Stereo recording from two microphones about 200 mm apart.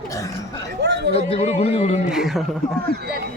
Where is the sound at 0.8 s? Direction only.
60° right (ahead or behind).